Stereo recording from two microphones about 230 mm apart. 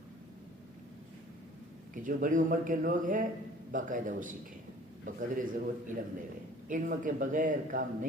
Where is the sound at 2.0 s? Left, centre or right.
Right.